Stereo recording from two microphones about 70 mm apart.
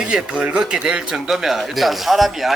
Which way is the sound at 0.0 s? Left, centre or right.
Centre.